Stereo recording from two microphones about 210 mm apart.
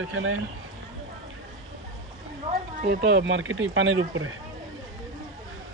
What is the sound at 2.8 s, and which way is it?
Speech, 50° right (ahead or behind).